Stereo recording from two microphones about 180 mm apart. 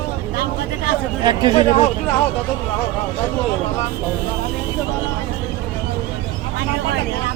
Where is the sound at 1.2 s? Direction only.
25° right (ahead or behind).